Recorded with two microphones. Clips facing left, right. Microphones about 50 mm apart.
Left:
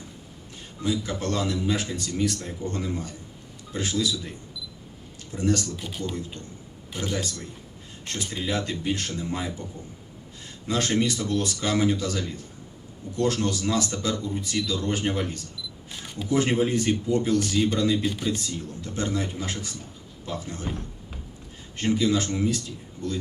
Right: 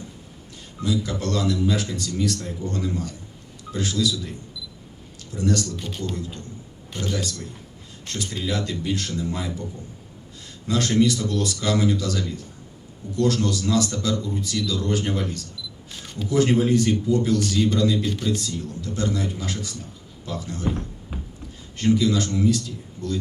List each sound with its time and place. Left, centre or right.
0.8 s speech: left
5.7 s speech: centre
6.1 s speech: left
10.7 s speech: left
18.0 s speech: centre
18.3 s speech: left
21.1 s a sound: centre
21.8 s speech: left